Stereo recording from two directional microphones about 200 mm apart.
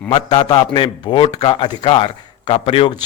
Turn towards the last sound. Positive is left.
turn(degrees=25)  # may be behind; listen again after turning